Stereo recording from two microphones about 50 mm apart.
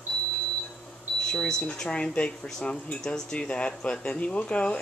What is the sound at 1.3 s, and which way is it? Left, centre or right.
Speech, centre.